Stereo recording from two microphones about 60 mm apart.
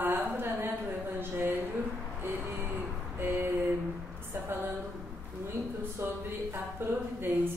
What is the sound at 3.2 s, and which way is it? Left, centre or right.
Speech, right.